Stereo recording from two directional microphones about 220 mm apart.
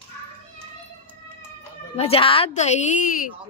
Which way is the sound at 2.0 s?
25° left (ahead or behind).